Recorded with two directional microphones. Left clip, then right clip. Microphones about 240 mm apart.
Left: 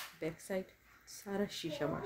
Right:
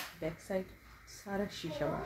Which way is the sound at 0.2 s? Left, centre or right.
Left.